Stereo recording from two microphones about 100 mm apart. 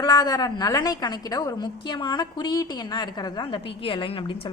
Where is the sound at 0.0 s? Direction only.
45° left (ahead or behind).